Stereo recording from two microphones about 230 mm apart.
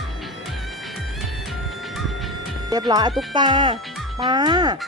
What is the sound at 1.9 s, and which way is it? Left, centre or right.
Music, centre.